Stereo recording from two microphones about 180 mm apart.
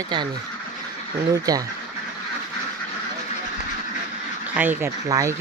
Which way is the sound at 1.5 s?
20° right (ahead or behind).